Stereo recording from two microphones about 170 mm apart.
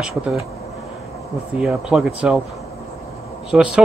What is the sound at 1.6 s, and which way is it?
Speech, 5° right (ahead or behind).